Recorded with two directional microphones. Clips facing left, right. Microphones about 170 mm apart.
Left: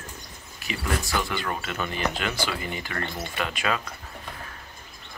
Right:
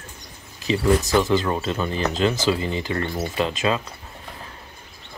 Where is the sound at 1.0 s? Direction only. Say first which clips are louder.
Right 8 dB; 40° right (ahead or behind).